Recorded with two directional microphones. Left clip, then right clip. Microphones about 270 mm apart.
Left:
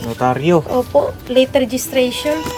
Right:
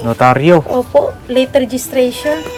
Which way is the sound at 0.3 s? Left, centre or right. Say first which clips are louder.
Right 5 dB; right.